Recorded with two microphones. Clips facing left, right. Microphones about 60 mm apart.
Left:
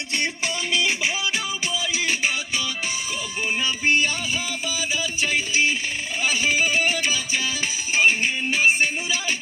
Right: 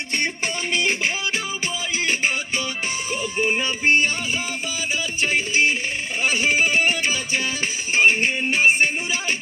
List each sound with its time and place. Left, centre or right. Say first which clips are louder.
2.0 s music: right 4 dB; right